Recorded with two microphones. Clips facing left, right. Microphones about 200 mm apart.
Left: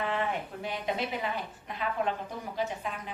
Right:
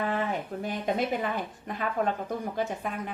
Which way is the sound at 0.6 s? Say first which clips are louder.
Right 5 dB; 45° right (ahead or behind).